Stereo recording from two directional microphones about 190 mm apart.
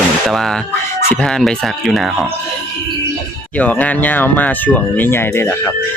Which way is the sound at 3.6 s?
5° left (ahead or behind).